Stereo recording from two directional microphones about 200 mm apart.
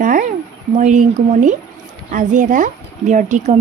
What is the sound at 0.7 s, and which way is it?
Speech, 40° right (ahead or behind).